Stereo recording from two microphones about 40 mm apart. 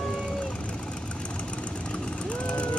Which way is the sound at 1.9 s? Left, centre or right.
Left.